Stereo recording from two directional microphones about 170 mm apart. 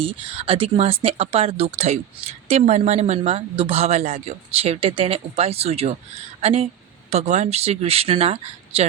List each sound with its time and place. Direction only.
0.0 s speech: 30° right (ahead or behind)